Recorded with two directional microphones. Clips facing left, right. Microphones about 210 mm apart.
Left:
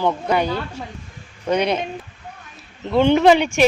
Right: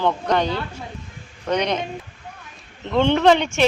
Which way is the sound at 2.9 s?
10° left (ahead or behind).